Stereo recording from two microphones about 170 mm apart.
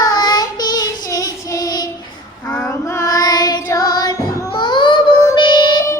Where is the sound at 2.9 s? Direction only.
20° left (ahead or behind).